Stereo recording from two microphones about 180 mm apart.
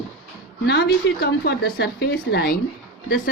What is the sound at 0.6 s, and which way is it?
Speech, 65° left (ahead or behind).